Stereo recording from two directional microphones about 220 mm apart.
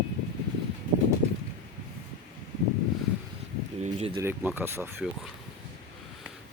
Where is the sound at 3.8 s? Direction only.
30° right (ahead or behind).